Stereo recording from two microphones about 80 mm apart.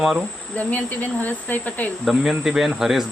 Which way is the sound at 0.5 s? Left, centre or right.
Left.